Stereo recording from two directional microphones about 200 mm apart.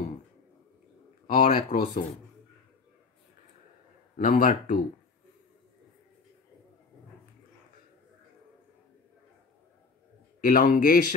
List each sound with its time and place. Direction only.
1.2 s speech: 40° left (ahead or behind)
4.2 s speech: 40° left (ahead or behind)
10.4 s speech: 40° left (ahead or behind)